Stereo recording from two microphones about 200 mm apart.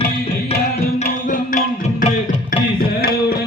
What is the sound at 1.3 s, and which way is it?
Music, 40° left (ahead or behind).